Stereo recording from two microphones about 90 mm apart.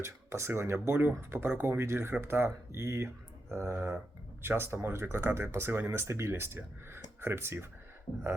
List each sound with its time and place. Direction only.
0.0 s speech: 30° right (ahead or behind)